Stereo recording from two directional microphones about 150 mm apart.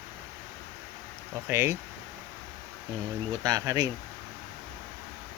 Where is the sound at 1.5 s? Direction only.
15° right (ahead or behind).